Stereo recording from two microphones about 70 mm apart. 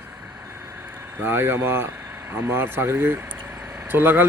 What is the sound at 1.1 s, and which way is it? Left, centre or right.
Speech, right.